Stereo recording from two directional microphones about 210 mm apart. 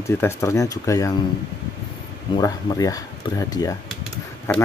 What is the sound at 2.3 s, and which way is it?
Speech, 15° left (ahead or behind).